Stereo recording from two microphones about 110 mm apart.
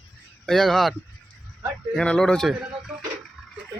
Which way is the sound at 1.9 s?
5° left (ahead or behind).